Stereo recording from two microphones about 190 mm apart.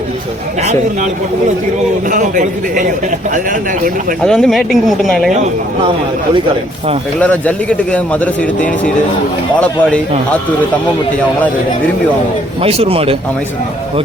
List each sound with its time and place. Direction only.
2.0 s a man's voice: 45° right (ahead or behind)
4.2 s speech: 5° left (ahead or behind)
7.2 s speech: 5° left (ahead or behind)
12.6 s speech: 30° right (ahead or behind)